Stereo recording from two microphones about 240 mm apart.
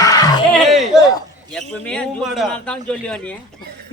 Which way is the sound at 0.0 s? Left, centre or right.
Centre.